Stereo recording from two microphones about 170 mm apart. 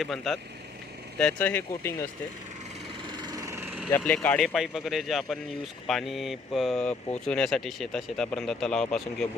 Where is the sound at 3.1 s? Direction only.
25° right (ahead or behind).